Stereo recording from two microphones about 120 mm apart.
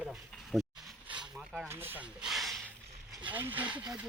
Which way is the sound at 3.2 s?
15° right (ahead or behind).